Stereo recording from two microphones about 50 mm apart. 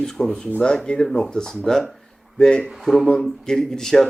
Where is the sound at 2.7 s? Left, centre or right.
Centre.